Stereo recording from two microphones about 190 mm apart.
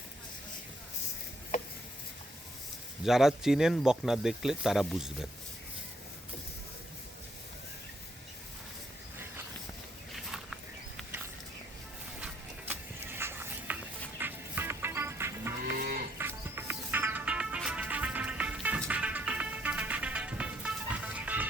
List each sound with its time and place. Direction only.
3.0 s speech: centre (ahead or behind)
10.3 s a sound: centre (ahead or behind)
12.2 s a sound: 10° right (ahead or behind)
14.2 s music: 10° right (ahead or behind)
15.6 s moo: 55° right (ahead or behind)
16.1 s music: 10° right (ahead or behind)